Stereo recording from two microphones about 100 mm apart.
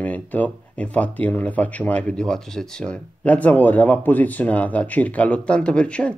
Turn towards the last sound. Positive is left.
turn(degrees=10)  # may be behind; listen again after turning